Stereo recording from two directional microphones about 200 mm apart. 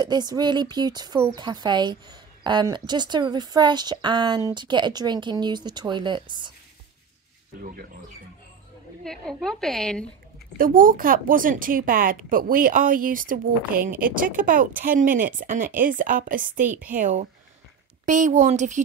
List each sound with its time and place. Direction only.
0.0 s speech: 20° right (ahead or behind)
9.0 s a woman's voice: 5° left (ahead or behind)
10.6 s a woman's voice: 45° right (ahead or behind)
16.6 s a woman's voice: 10° right (ahead or behind)
16.9 s a woman's voice: 35° right (ahead or behind)